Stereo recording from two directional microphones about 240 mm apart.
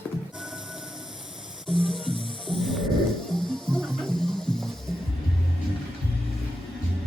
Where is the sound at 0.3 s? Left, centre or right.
Centre.